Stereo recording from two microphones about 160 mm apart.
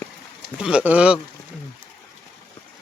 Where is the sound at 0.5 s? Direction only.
5° right (ahead or behind).